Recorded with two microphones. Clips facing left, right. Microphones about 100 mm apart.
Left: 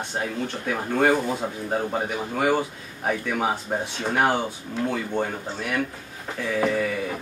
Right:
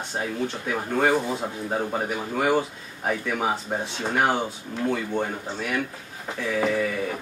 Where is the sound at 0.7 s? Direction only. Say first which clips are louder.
Left 2 dB; centre (ahead or behind).